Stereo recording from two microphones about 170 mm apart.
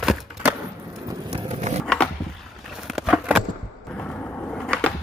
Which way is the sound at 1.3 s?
40° right (ahead or behind).